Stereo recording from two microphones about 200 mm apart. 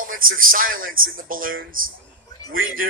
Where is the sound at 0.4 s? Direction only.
45° right (ahead or behind).